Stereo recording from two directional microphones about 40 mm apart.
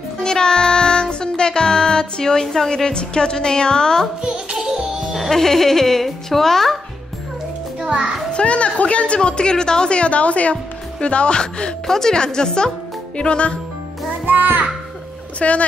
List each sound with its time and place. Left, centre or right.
0.2 s music: centre
2.7 s a woman's voice: left
4.2 s music: centre
5.3 s a child's voice: centre
7.8 s a child's voice: right
8.3 s a woman's voice: left
14.2 s music: right
15.3 s speech: left